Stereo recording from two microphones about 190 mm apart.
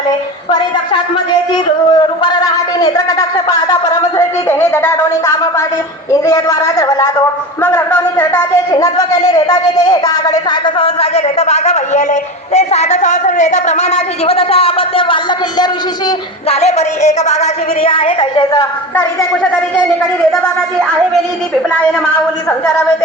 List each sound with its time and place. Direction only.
1.3 s a man's voice: 25° left (ahead or behind)
10.5 s a sound: 30° left (ahead or behind)
16.5 s a woman's voice: 35° left (ahead or behind)